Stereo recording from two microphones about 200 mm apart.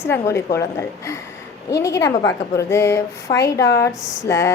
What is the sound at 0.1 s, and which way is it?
Speech, 15° left (ahead or behind).